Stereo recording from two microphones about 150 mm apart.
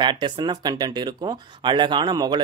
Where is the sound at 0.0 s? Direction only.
30° right (ahead or behind).